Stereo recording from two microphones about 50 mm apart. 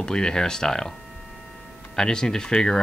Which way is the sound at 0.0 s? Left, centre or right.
Centre.